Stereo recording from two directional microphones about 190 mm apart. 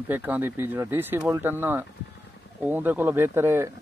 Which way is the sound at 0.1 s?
10° right (ahead or behind).